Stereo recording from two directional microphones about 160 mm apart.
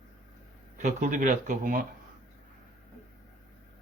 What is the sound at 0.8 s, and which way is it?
Speech, 50° right (ahead or behind).